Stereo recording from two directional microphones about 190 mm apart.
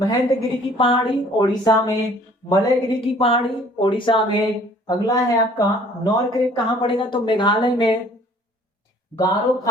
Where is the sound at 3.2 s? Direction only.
30° left (ahead or behind).